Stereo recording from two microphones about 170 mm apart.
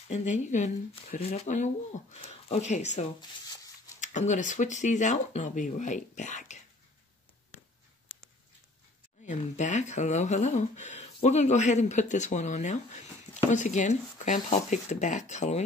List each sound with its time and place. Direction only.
0.1 s speech: 45° left (ahead or behind)
9.2 s speech: 45° left (ahead or behind)